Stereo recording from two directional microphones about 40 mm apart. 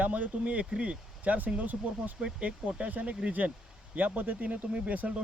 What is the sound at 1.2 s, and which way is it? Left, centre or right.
Speech, right.